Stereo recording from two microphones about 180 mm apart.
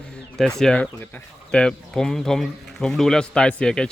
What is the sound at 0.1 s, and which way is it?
Speech, 5° left (ahead or behind).